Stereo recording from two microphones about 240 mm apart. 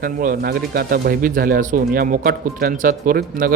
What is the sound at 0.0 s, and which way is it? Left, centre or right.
Speech, right.